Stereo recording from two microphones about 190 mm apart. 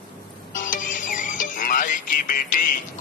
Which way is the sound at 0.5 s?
45° left (ahead or behind).